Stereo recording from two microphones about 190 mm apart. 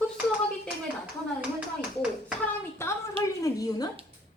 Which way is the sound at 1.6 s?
5° right (ahead or behind).